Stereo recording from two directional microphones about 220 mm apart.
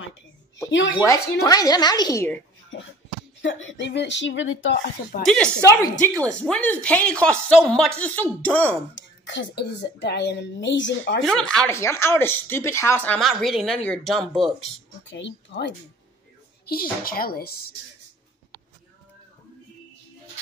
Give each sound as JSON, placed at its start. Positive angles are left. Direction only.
{"t": 1.0, "sound": "speech", "side_deg": 15}
{"t": 2.7, "sound": "speech", "side_deg": 60}
{"t": 5.2, "sound": "a woman's voice", "side_deg": 5}
{"t": 8.9, "sound": "speech", "side_deg": 55}
{"t": 11.2, "sound": "a woman's voice", "side_deg": 5}
{"t": 14.6, "sound": "speech", "side_deg": 55}
{"t": 16.6, "sound": "speech", "side_deg": 40}